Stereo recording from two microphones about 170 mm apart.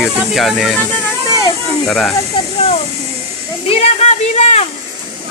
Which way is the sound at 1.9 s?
5° left (ahead or behind).